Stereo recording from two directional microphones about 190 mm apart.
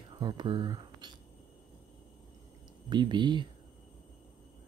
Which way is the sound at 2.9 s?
25° right (ahead or behind).